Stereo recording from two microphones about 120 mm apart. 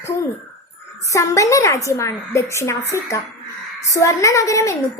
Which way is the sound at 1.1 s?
25° left (ahead or behind).